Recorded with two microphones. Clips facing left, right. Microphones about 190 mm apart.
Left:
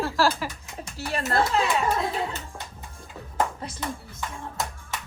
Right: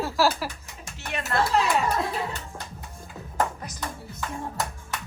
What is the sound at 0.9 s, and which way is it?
Speech, 35° left (ahead or behind).